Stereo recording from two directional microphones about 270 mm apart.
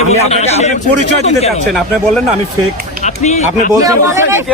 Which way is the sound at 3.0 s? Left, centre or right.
Left.